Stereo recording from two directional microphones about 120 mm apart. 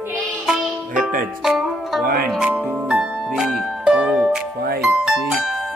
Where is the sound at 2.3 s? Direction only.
10° right (ahead or behind).